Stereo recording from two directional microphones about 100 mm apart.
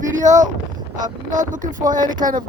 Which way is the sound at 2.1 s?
45° right (ahead or behind).